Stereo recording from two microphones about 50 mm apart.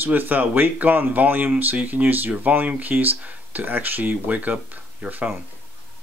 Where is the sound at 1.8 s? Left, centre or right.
Right.